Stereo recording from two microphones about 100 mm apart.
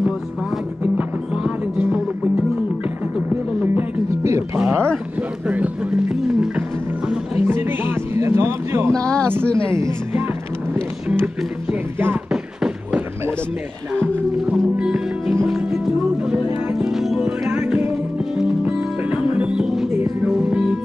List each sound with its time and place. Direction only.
0.9 s music: 15° right (ahead or behind)
4.1 s music: 30° right (ahead or behind)
4.6 s a sound: 25° right (ahead or behind)
5.5 s music: 10° right (ahead or behind)
7.4 s music: 20° right (ahead or behind)
12.3 s beatboxing: 10° right (ahead or behind)
14.5 s music: 10° right (ahead or behind)